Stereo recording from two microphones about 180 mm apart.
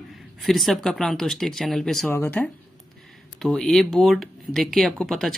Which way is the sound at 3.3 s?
Centre (ahead or behind).